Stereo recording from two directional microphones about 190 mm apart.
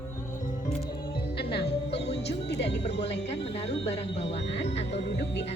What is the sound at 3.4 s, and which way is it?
Speech, 35° left (ahead or behind).